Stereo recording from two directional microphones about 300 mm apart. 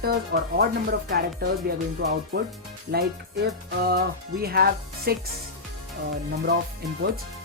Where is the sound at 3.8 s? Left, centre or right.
Right.